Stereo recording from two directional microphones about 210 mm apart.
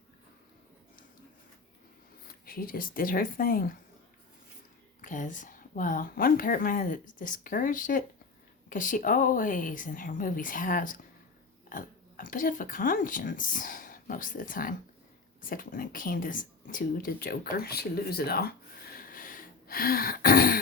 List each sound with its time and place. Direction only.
2.2 s speech: 45° left (ahead or behind)
4.9 s speech: 40° left (ahead or behind)